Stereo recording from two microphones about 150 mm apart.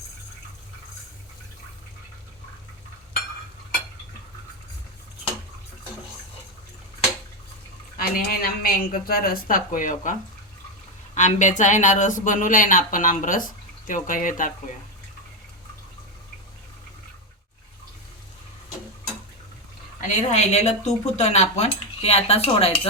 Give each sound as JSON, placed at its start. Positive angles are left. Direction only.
{"t": 7.9, "sound": "a woman's voice", "side_deg": 75}
{"t": 20.0, "sound": "speech", "side_deg": 50}